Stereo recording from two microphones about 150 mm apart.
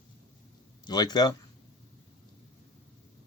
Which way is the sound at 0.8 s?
25° left (ahead or behind).